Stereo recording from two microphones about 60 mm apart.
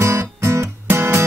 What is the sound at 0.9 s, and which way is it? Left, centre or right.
Guitar, right.